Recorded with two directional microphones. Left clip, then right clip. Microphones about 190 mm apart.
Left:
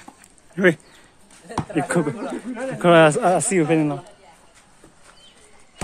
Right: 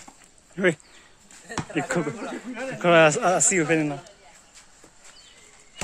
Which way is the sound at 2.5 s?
25° right (ahead or behind).